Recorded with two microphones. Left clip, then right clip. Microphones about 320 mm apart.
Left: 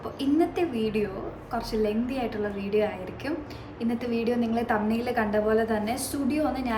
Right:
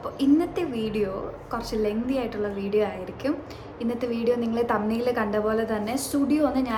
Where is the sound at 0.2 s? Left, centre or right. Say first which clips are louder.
Right 2 dB; centre.